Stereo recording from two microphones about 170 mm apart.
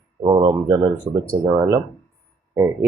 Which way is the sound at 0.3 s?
20° right (ahead or behind).